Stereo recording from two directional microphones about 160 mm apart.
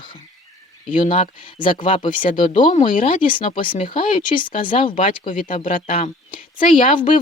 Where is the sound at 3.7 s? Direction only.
35° left (ahead or behind).